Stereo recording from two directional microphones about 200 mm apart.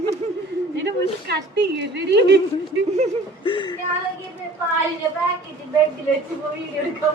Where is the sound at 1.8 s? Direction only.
60° right (ahead or behind).